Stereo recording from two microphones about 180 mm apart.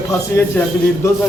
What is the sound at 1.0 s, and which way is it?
Speech, 15° left (ahead or behind).